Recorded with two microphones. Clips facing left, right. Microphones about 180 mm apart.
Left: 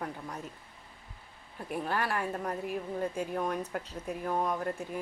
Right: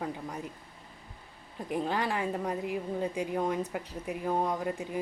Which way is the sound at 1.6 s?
15° right (ahead or behind).